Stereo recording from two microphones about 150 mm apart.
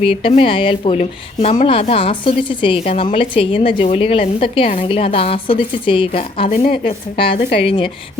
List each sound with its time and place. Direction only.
0.0 s speech: 40° left (ahead or behind)
6.5 s a woman's voice: 55° left (ahead or behind)
6.8 s speech: 35° left (ahead or behind)